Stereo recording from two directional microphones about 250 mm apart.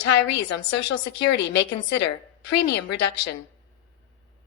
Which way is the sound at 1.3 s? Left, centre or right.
Left.